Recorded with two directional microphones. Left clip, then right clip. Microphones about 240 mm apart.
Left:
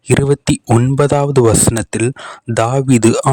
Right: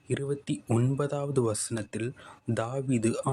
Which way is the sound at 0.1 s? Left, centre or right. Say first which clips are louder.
Left 18 dB; left.